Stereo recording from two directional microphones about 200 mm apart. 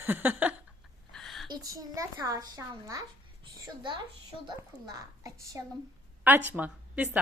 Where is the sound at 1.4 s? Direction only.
20° right (ahead or behind).